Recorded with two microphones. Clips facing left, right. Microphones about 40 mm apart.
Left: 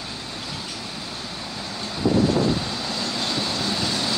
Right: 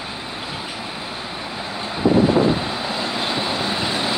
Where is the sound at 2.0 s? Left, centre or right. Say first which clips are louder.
Right 4 dB; right.